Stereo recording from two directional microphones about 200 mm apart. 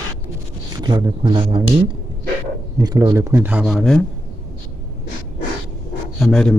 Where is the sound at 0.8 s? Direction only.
20° right (ahead or behind).